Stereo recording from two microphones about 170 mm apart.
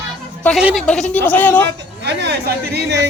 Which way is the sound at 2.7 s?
90° right.